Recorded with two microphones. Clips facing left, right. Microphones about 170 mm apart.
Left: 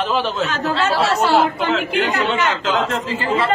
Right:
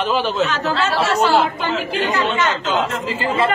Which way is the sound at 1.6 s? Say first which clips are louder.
Left 2 dB; 65° left (ahead or behind).